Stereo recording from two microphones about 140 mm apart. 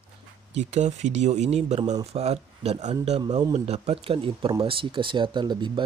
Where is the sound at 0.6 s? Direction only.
55° right (ahead or behind).